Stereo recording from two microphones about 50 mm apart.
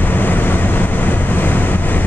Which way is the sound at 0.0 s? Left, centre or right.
Left.